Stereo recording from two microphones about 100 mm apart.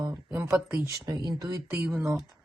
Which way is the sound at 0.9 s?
40° right (ahead or behind).